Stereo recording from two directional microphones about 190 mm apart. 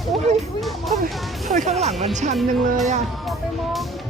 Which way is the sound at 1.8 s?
35° right (ahead or behind).